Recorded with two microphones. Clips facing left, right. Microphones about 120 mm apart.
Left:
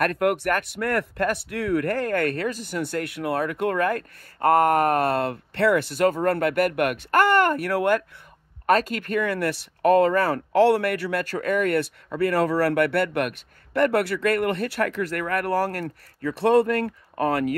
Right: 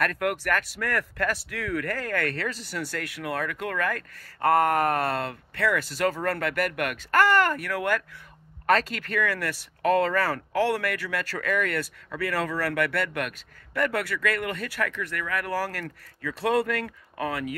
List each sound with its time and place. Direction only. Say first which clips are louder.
0.4 s speech: left 3 dB; 25° left (ahead or behind)
2.5 s speech: left 5 dB; 45° left (ahead or behind)
2.8 s speech: left 6 dB; 20° left (ahead or behind)
9.1 s speech: left 4 dB; 25° left (ahead or behind)
9.8 s a sound: left 5 dB; 45° left (ahead or behind)
10.0 s speech: left 5 dB; 25° left (ahead or behind)
11.8 s speech: left 7 dB; 30° left (ahead or behind); by 15.5 s 50° left (ahead or behind)
15.7 s speech: left 5 dB; 35° left (ahead or behind)